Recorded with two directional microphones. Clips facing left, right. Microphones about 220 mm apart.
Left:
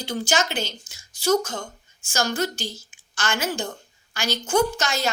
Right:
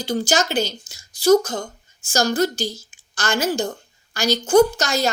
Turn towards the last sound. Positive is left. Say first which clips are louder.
# right 6 dB
turn(degrees=-40)  # may be behind; listen again after turning